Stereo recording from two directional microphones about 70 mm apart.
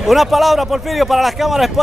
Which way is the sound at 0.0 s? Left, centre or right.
Centre.